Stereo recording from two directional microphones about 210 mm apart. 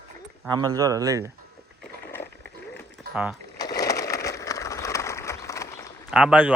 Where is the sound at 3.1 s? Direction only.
45° right (ahead or behind).